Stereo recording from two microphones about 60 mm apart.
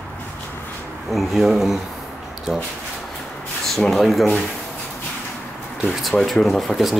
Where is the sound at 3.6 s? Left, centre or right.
Centre.